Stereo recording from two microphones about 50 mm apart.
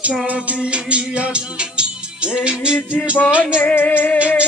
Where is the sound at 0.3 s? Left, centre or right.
Right.